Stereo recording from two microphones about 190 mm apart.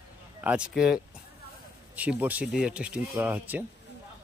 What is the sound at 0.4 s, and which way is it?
Speech, 5° right (ahead or behind).